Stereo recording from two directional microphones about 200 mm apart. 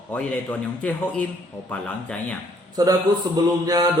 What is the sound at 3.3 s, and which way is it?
Speech, 20° right (ahead or behind).